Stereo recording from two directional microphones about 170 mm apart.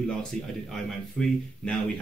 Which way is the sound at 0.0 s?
5° left (ahead or behind).